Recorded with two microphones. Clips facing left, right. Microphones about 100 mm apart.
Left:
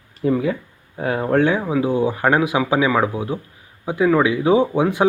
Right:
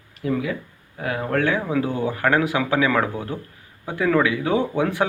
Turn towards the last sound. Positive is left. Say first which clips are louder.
# left 4 dB
turn(degrees=15)  # may be behind; listen again after turning